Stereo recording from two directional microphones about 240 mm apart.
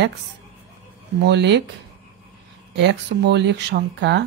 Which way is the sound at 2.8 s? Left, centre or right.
Right.